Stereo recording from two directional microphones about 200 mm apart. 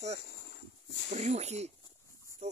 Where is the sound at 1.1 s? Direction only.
35° right (ahead or behind).